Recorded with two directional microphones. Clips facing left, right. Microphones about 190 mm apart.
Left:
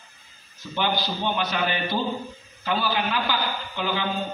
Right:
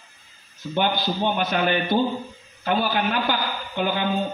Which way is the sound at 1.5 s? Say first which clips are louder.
Right 5 dB; 50° right (ahead or behind).